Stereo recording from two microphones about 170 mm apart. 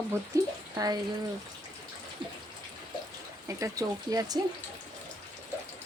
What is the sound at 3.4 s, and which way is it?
Speech, 20° right (ahead or behind).